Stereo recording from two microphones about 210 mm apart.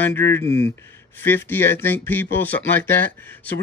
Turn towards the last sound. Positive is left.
turn(degrees=10)  # may be behind; listen again after turning